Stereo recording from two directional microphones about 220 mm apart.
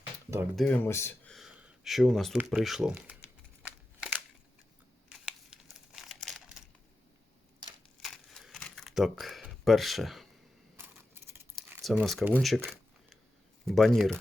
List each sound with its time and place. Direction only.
0.5 s speech: 5° left (ahead or behind)
3.6 s a sound: 5° right (ahead or behind)
5.1 s crumpling: centre (ahead or behind)
7.6 s a sound: 20° right (ahead or behind)
8.0 s crumpling: centre (ahead or behind)
10.8 s coin: 10° right (ahead or behind)
11.5 s speech: centre (ahead or behind)
13.7 s speech: centre (ahead or behind)